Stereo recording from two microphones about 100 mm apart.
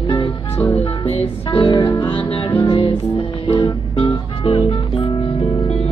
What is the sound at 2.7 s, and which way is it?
Music, 50° left (ahead or behind).